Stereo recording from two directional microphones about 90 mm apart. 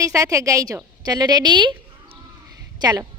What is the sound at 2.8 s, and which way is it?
Speech, 45° right (ahead or behind).